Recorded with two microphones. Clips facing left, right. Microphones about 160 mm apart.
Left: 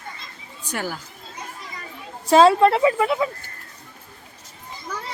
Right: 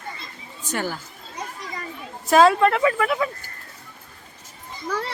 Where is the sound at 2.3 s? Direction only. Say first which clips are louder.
Left 2 dB; 30° left (ahead or behind).